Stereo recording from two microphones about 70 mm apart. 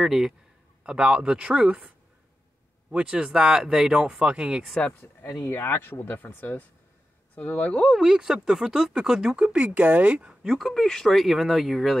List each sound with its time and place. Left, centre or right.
0.0 s speech: centre
2.9 s speech: centre
4.7 s speech: centre
5.4 s speech: left; by 7.8 s centre
8.0 s speech: centre
10.4 s speech: centre